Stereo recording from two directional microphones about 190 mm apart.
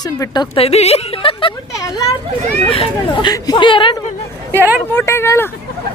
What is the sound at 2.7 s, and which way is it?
A woman's voice, 25° left (ahead or behind).